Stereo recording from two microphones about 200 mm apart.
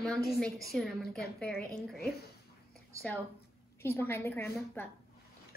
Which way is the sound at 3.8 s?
10° left (ahead or behind).